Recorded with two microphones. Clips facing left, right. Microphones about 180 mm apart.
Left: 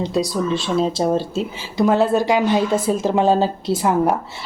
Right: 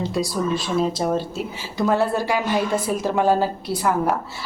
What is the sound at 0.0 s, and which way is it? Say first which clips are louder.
Speech: left 3 dB; 20° left (ahead or behind).